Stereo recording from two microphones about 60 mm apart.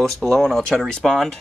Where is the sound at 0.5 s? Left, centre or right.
Centre.